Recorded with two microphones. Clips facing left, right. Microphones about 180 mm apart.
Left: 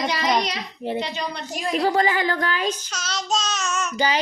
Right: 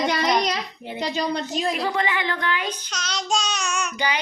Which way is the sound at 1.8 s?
40° left (ahead or behind).